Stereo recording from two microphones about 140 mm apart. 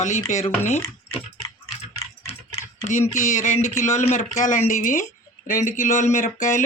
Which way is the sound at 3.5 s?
20° left (ahead or behind).